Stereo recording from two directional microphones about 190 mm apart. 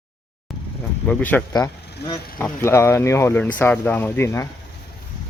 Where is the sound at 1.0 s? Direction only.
10° left (ahead or behind).